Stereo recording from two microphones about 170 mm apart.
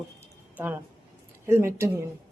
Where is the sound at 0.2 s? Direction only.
10° right (ahead or behind).